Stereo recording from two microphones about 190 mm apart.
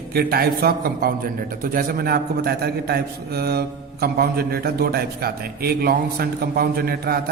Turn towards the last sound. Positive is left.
turn(degrees=-55)  # may be behind; listen again after turning